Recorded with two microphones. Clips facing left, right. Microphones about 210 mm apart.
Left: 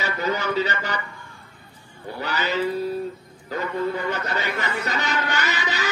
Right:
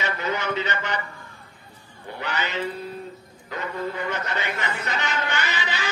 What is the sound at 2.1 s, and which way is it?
A man's voice, 35° left (ahead or behind).